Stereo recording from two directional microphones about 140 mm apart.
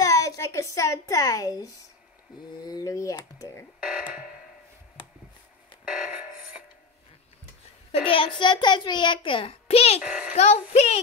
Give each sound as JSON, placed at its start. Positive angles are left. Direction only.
{"t": 0.0, "sound": "a child's voice", "side_deg": 20}
{"t": 3.8, "sound": "music", "side_deg": -5}
{"t": 7.9, "sound": "a child's voice", "side_deg": 40}
{"t": 10.0, "sound": "a child's voice", "side_deg": -10}
{"t": 10.3, "sound": "speech", "side_deg": 50}